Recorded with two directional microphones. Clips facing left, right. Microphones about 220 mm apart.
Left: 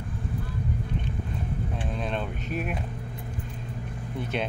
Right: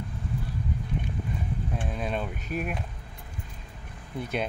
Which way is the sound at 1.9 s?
5° right (ahead or behind).